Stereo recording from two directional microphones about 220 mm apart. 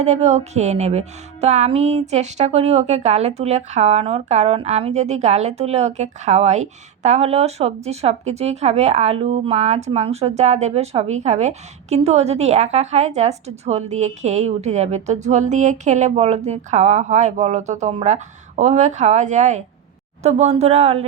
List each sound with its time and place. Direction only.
0.0 s music: 30° right (ahead or behind)
20.2 s speech: 30° right (ahead or behind)